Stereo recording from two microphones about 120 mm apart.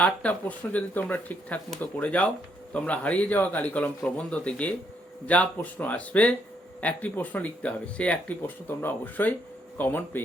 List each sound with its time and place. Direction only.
0.0 s speech: 10° left (ahead or behind)